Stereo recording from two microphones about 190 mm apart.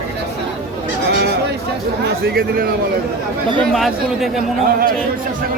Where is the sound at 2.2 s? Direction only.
50° right (ahead or behind).